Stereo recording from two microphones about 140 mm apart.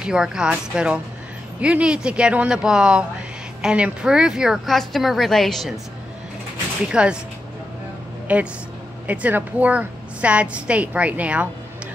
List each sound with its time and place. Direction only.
0.0 s a woman's voice: 5° right (ahead or behind)
6.8 s a woman's voice: 5° right (ahead or behind)
8.3 s a woman's voice: 10° right (ahead or behind)